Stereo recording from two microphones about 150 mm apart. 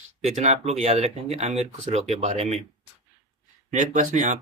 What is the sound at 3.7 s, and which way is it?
Speech, 55° right (ahead or behind).